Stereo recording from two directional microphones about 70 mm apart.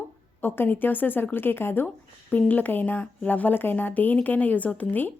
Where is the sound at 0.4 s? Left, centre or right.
Left.